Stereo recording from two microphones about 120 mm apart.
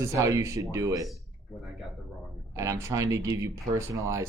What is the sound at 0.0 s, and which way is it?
Speech, 25° right (ahead or behind).